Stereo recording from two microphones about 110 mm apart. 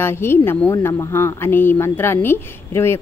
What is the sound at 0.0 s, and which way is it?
Speech, 20° left (ahead or behind).